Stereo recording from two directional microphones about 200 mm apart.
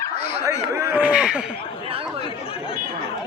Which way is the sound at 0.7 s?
10° right (ahead or behind).